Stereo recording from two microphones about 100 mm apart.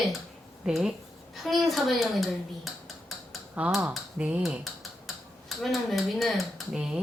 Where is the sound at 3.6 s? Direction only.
10° right (ahead or behind).